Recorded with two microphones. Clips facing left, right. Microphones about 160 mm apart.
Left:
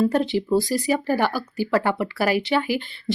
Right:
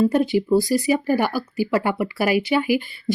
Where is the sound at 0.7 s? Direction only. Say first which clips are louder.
Right 3 dB; 45° left (ahead or behind).